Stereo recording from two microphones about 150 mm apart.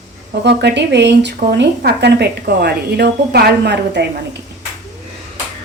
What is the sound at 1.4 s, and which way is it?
A woman's voice, 90° right.